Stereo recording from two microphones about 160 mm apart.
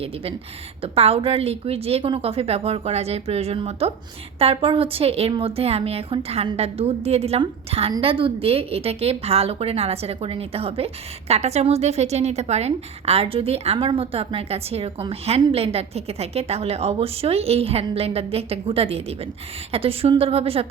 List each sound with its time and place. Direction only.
0.8 s a woman's voice: 40° right (ahead or behind)